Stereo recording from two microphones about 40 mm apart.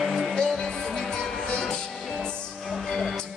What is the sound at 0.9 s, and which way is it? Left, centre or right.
Music, left.